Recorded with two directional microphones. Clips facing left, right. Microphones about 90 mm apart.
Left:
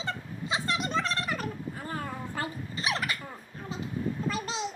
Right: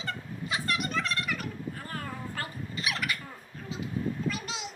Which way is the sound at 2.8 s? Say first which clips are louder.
Left 2 dB; 30° left (ahead or behind).